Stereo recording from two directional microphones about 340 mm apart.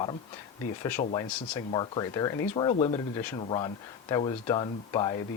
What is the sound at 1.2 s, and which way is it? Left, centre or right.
Speech, centre.